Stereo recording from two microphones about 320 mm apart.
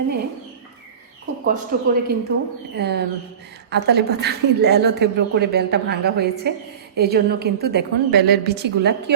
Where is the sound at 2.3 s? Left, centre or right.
Right.